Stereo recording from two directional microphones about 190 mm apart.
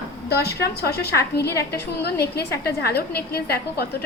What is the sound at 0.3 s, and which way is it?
A woman's voice, 60° left (ahead or behind).